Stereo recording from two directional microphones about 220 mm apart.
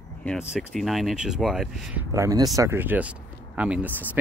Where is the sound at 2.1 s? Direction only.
15° right (ahead or behind).